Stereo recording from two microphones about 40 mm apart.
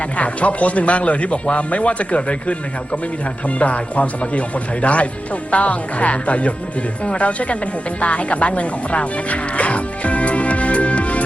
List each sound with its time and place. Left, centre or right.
0.2 s speech: left